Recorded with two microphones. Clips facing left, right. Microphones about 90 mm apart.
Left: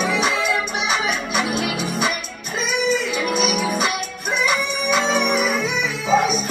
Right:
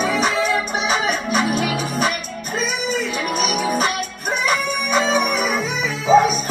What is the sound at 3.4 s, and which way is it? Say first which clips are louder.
Music: right 3 dB; centre (ahead or behind).